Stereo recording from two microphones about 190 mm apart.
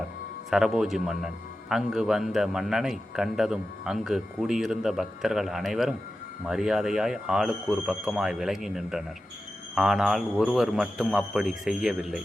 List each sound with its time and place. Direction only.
0.5 s a man's voice: centre (ahead or behind)